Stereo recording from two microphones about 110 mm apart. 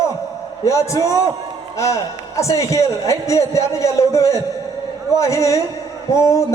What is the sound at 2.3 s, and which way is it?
A man's voice, 30° left (ahead or behind).